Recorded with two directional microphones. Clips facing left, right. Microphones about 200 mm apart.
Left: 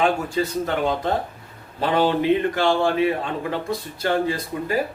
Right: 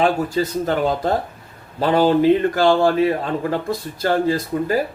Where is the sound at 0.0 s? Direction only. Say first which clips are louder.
Right 3 dB; 35° right (ahead or behind).